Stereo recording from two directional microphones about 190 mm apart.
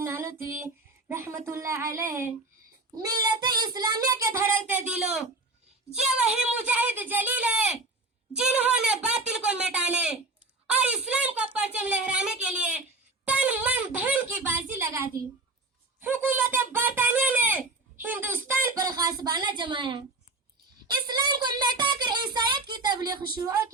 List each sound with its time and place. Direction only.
0.0 s female singing: 15° right (ahead or behind)
3.0 s speech: 20° right (ahead or behind); by 5.2 s 5° right (ahead or behind)
6.6 s speech: 10° right (ahead or behind)